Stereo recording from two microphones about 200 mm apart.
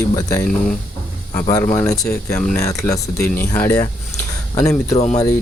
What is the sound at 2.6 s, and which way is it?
Speech, 15° left (ahead or behind).